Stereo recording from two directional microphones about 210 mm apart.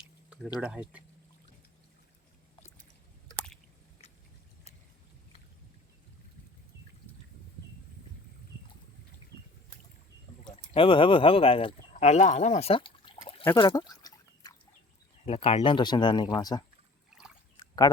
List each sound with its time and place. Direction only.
0.6 s speech: 5° right (ahead or behind)
10.8 s speech: 25° left (ahead or behind)
13.6 s a sound: 20° left (ahead or behind)
15.2 s speech: 30° left (ahead or behind)
17.1 s boat: 5° right (ahead or behind)